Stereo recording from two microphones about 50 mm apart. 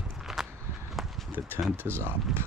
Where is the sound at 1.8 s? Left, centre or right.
Right.